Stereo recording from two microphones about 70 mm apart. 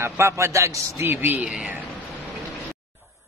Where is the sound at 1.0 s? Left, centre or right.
Right.